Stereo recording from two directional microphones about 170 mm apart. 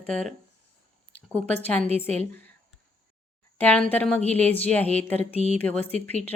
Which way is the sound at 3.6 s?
10° left (ahead or behind).